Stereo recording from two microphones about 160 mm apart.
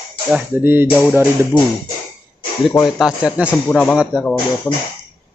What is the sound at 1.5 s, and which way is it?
Speech, 30° left (ahead or behind).